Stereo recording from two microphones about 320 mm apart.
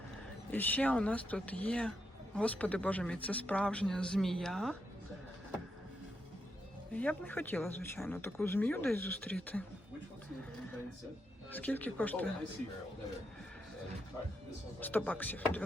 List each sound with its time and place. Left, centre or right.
0.5 s speech: centre
6.9 s speech: centre
11.5 s speech: centre
14.8 s speech: centre